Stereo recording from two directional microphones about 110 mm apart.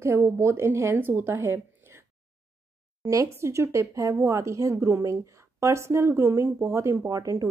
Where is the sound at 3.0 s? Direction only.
25° right (ahead or behind).